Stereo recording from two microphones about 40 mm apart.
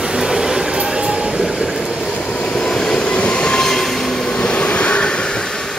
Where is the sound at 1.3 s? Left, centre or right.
Centre.